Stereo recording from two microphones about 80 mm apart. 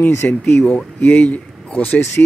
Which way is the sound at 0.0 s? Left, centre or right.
Left.